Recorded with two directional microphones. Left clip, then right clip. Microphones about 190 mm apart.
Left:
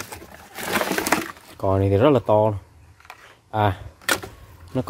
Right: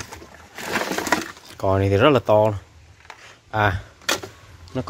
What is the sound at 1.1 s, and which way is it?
Speech, 5° left (ahead or behind).